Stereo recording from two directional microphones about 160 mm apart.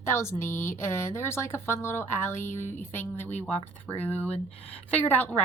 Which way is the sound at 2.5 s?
50° left (ahead or behind).